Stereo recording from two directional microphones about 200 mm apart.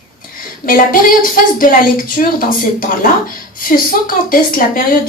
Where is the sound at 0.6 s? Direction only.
45° left (ahead or behind).